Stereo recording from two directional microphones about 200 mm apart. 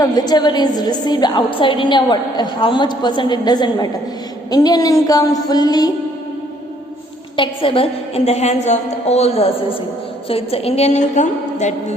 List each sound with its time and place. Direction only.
0.0 s a woman's voice: 20° left (ahead or behind)
7.3 s a woman's voice: 25° left (ahead or behind)